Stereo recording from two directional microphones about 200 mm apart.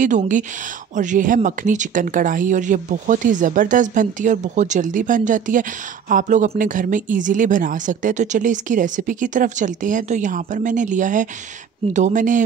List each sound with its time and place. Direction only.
0.0 s speech: 40° right (ahead or behind)